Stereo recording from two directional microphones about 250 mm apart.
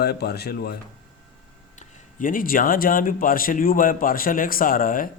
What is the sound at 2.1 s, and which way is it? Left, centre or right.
A man's voice, left.